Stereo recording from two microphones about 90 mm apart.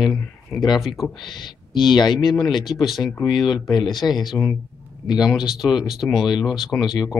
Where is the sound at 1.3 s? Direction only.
60° left (ahead or behind).